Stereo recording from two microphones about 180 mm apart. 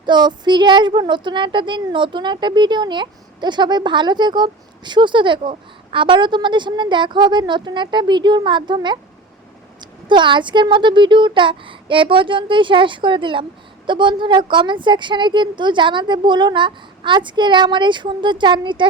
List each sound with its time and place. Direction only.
0.0 s speech: 25° right (ahead or behind)
10.1 s speech: 25° right (ahead or behind)